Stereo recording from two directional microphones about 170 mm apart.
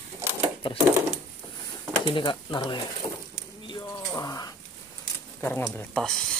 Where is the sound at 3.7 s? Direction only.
20° left (ahead or behind).